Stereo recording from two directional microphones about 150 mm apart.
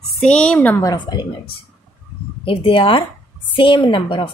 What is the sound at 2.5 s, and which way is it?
A woman's voice, 35° left (ahead or behind).